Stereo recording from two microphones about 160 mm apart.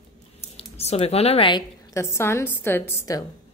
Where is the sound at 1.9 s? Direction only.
15° left (ahead or behind).